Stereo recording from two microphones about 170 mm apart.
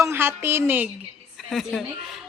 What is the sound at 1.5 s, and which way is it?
Speech, centre (ahead or behind).